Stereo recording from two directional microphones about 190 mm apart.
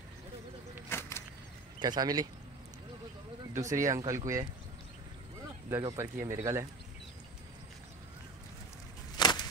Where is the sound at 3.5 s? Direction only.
15° right (ahead or behind).